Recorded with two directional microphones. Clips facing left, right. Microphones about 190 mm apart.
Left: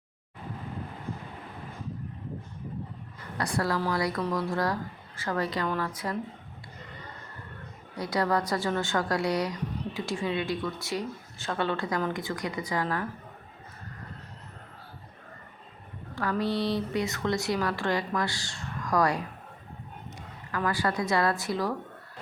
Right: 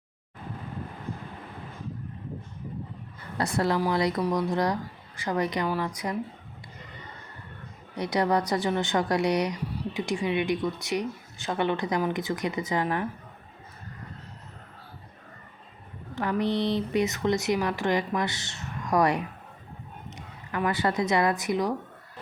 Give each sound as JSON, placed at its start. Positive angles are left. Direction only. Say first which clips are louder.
{"t": 3.3, "sound": "speech", "louder": "right 3 dB", "side_deg": -25}
{"t": 7.9, "sound": "speech", "louder": "right 2 dB", "side_deg": -20}
{"t": 16.1, "sound": "a woman's voice", "louder": "right 2 dB", "side_deg": -20}